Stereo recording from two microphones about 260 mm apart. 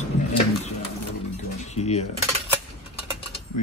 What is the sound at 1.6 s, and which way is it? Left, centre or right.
Speech, left.